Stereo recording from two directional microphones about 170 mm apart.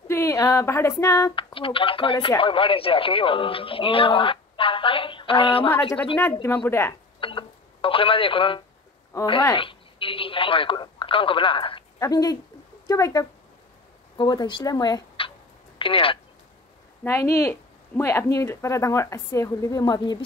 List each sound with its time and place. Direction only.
0.1 s speech: 15° left (ahead or behind)
1.3 s speech: 30° left (ahead or behind)
5.7 s speech: 10° left (ahead or behind)
7.2 s telephone: 30° left (ahead or behind)
9.1 s speech: 25° left (ahead or behind)
17.0 s speech: 15° left (ahead or behind)